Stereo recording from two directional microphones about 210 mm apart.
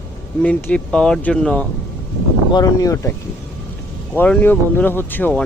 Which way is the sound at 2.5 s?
20° left (ahead or behind).